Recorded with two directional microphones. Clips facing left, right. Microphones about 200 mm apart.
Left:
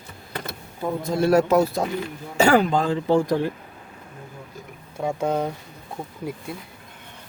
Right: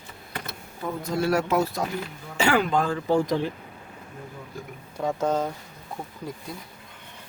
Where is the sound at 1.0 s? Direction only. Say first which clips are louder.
Left 6 dB; 40° left (ahead or behind).